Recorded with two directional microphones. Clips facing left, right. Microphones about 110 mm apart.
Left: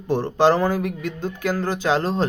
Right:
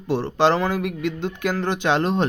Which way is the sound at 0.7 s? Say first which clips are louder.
Even; 20° right (ahead or behind).